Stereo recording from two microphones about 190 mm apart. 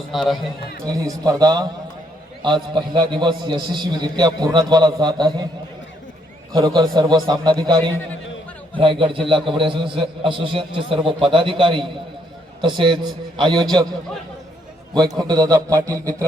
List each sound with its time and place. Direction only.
0.1 s a man's voice: centre (ahead or behind)
0.9 s a man's voice: 20° right (ahead or behind)
6.5 s a man's voice: 20° right (ahead or behind)
8.8 s a man's voice: 25° right (ahead or behind)
14.9 s a man's voice: 20° right (ahead or behind)